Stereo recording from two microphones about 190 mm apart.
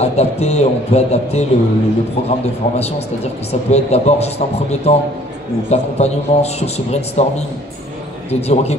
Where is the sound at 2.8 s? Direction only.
35° left (ahead or behind).